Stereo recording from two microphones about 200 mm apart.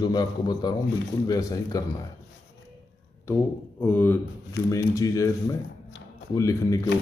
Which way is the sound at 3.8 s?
10° left (ahead or behind).